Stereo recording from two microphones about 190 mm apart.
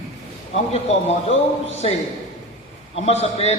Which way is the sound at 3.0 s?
30° left (ahead or behind).